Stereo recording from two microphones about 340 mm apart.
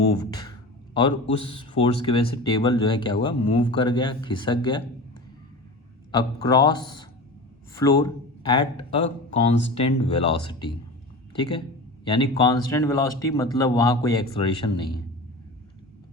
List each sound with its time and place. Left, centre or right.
0.2 s speech: centre
6.1 s speech: centre